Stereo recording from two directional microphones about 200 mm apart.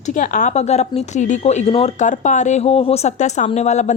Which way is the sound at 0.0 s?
40° left (ahead or behind).